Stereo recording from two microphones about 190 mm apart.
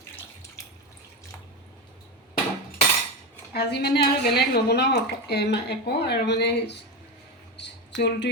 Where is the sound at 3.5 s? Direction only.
60° left (ahead or behind).